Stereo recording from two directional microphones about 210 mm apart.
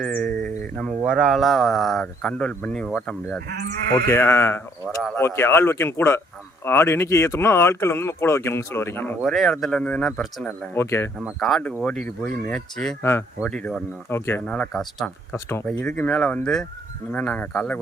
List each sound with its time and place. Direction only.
0.0 s speech: 5° left (ahead or behind)
3.5 s speech: 50° right (ahead or behind)
4.1 s speech: 10° left (ahead or behind)
9.2 s speech: centre (ahead or behind)